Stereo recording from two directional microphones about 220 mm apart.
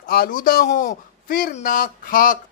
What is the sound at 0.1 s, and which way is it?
A man's voice, 40° left (ahead or behind).